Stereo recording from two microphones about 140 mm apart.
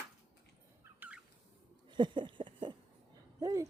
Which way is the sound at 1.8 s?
35° right (ahead or behind).